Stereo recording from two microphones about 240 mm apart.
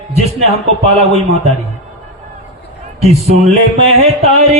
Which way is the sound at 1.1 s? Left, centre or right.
Right.